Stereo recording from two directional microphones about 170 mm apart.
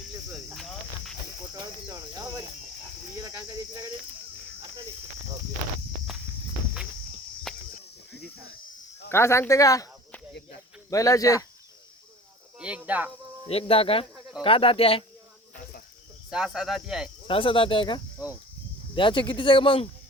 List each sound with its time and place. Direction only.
0.5 s cricket: centre (ahead or behind)
1.6 s cricket: 20° right (ahead or behind)
7.5 s cricket: centre (ahead or behind)
9.0 s speech: 15° left (ahead or behind)
10.8 s speech: 20° left (ahead or behind)
12.5 s speech: 5° right (ahead or behind)
13.5 s speech: 35° left (ahead or behind)
16.3 s cricket: 5° right (ahead or behind)
17.2 s speech: 30° left (ahead or behind)